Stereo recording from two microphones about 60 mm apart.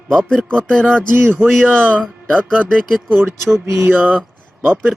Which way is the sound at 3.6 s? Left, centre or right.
Right.